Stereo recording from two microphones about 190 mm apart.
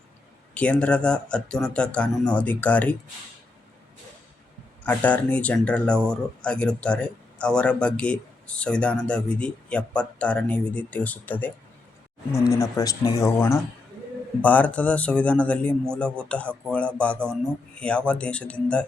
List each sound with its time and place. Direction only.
0.5 s speech: 5° left (ahead or behind)
4.8 s speech: 10° left (ahead or behind)